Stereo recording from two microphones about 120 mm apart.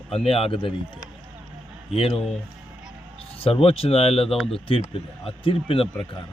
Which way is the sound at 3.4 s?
50° left (ahead or behind).